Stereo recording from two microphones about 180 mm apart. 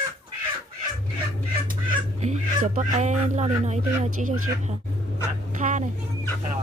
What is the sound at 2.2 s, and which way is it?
Speech, 40° right (ahead or behind).